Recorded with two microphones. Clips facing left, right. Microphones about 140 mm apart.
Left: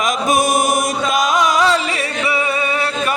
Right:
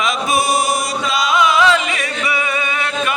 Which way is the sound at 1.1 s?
45° left (ahead or behind).